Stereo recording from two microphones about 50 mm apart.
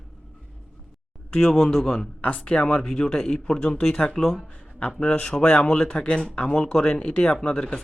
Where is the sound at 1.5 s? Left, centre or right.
Centre.